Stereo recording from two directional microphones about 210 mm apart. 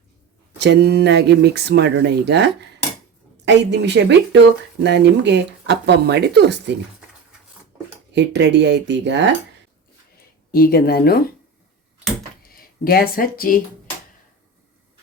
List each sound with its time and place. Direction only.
0.6 s speech: 55° right (ahead or behind)
8.1 s speech: 55° right (ahead or behind)
10.5 s speech: 45° left (ahead or behind)
12.5 s speech: 45° left (ahead or behind)